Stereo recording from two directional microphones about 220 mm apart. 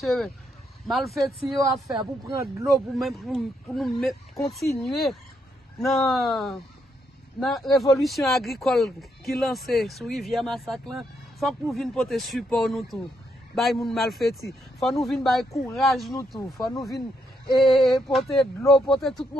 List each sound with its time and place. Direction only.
0.0 s speech: centre (ahead or behind)
1.9 s speech: 20° right (ahead or behind)
2.6 s speech: centre (ahead or behind)
16.3 s speech: 15° left (ahead or behind)
16.6 s speech: centre (ahead or behind)